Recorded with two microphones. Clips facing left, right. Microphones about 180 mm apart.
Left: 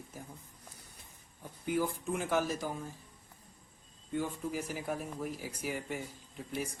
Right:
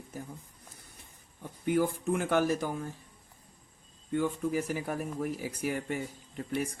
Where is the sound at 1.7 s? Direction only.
65° right (ahead or behind).